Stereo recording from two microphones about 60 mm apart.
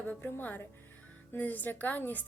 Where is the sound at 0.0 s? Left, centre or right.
Left.